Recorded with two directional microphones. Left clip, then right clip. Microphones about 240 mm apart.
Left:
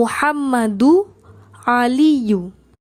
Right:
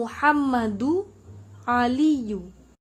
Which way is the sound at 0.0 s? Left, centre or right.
Left.